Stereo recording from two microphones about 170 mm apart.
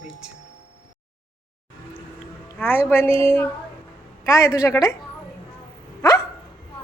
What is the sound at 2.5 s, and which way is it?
A woman's voice, 10° left (ahead or behind).